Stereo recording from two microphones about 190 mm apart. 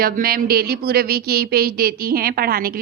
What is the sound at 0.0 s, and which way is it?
Speech, 50° right (ahead or behind).